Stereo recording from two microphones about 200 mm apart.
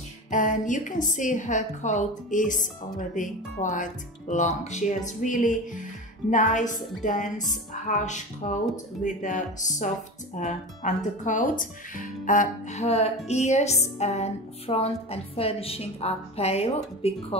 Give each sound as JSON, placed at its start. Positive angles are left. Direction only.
{"t": 0.3, "sound": "a woman's voice", "side_deg": 40}